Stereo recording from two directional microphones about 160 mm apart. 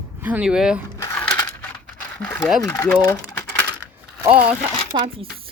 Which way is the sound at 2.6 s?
20° left (ahead or behind).